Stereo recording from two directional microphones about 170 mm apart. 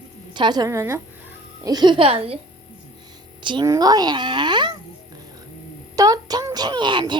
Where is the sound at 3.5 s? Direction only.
25° right (ahead or behind).